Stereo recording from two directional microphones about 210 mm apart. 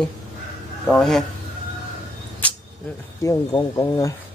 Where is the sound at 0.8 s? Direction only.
Centre (ahead or behind).